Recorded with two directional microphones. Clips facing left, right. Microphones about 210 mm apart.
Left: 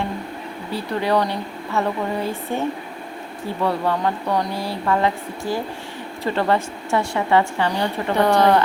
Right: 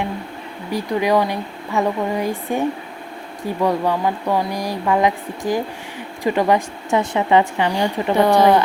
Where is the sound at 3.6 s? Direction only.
15° right (ahead or behind).